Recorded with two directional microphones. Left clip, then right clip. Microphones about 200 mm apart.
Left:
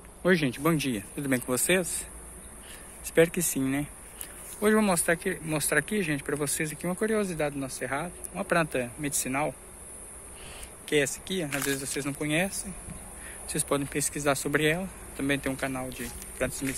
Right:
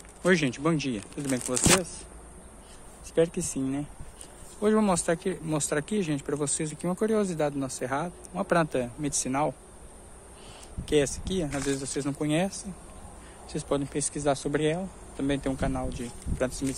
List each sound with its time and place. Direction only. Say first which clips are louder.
0.2 s speech: even; 5° right (ahead or behind)
3.2 s speech: left 2 dB; centre (ahead or behind); by 9.6 s 20° right (ahead or behind)
10.9 s speech: right 1 dB; 25° right (ahead or behind)
13.5 s speech: even; 10° right (ahead or behind)